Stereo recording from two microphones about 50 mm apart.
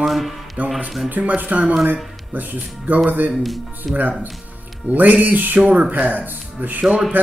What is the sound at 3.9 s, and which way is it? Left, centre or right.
Speech, right.